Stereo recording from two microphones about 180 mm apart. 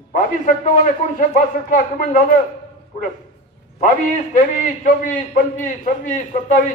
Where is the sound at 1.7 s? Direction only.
50° left (ahead or behind).